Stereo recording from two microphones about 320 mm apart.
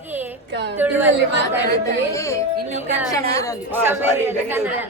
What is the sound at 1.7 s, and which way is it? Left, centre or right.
Speech, centre.